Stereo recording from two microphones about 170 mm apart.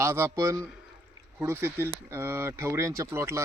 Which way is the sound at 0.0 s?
15° right (ahead or behind).